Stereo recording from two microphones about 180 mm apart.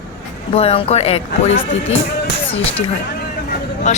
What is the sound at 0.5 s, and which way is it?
Speech, 35° left (ahead or behind).